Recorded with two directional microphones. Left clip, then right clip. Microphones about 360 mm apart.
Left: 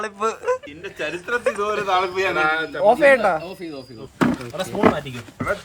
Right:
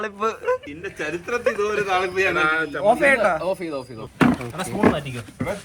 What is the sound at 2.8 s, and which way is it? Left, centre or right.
Speech, left.